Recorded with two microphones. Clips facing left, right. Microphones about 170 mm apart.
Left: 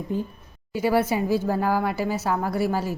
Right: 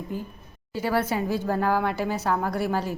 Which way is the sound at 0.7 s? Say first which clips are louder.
Left 3 dB; 10° left (ahead or behind).